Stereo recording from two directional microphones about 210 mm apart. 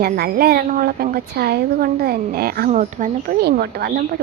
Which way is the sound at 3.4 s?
50° right (ahead or behind).